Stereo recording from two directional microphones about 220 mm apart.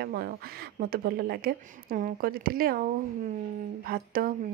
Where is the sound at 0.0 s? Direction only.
45° right (ahead or behind).